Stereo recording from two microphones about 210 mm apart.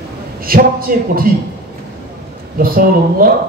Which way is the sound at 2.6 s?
45° right (ahead or behind).